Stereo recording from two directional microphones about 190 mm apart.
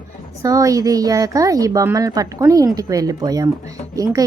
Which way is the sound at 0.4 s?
20° right (ahead or behind).